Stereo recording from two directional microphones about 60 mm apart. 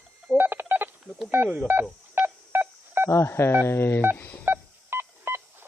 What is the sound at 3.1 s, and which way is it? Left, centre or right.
Speech, left.